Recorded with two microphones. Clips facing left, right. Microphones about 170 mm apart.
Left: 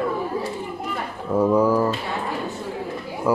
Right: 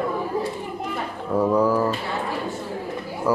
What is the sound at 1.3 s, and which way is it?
Speech, centre (ahead or behind).